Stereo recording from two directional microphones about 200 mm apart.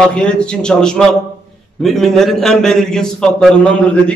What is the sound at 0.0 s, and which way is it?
A man's voice, 5° left (ahead or behind).